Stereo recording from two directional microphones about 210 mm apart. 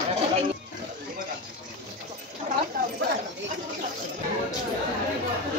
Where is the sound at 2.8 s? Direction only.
40° right (ahead or behind).